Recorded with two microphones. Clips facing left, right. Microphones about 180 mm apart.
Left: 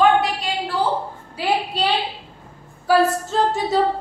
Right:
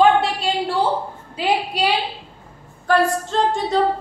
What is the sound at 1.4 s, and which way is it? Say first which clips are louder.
Speech: right 1 dB; 10° right (ahead or behind).